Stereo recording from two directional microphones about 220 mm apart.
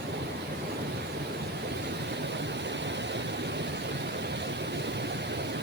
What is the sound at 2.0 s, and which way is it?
Vehicle, 50° right (ahead or behind).